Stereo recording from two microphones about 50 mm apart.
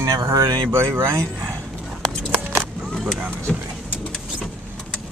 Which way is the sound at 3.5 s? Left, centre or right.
Left.